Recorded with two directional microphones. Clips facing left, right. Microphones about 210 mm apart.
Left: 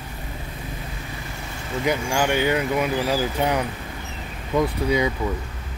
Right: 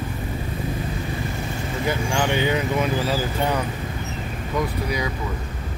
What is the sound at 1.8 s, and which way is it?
Speech, 15° left (ahead or behind).